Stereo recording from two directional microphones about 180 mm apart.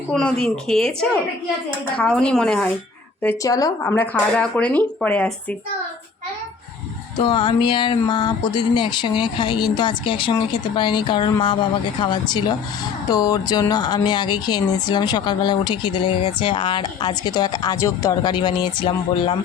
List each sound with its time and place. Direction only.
0.1 s speech: 5° left (ahead or behind)
2.0 s speech: 5° left (ahead or behind)
3.2 s speech: 20° left (ahead or behind)
7.2 s speech: 30° left (ahead or behind)